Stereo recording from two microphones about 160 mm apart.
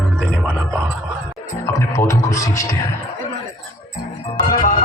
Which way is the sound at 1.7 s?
20° left (ahead or behind).